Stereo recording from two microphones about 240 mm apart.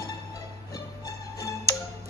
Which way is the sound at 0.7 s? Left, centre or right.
Centre.